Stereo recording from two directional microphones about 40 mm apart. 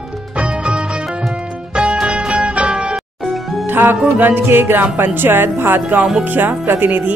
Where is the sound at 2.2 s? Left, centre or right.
Right.